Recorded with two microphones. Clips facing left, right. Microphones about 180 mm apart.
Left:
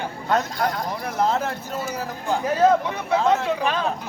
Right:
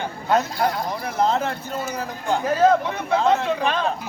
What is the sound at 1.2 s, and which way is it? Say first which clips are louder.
A man's voice: right 1 dB; 5° left (ahead or behind).